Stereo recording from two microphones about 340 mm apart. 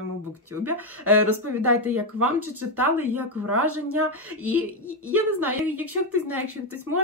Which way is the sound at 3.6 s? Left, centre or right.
Right.